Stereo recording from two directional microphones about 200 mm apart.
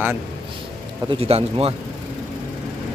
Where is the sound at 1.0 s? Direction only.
30° right (ahead or behind).